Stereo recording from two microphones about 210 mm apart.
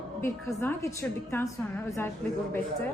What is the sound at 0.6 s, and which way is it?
A woman's voice, 10° left (ahead or behind).